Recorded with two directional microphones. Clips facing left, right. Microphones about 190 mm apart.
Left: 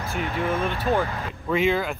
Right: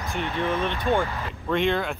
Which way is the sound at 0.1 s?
5° left (ahead or behind).